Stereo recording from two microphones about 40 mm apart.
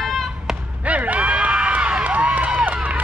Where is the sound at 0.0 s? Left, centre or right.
Centre.